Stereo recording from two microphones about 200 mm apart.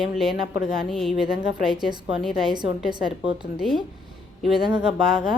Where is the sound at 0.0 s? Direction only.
Centre (ahead or behind).